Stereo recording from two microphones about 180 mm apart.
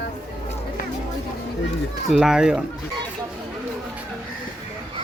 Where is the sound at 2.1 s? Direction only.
Centre (ahead or behind).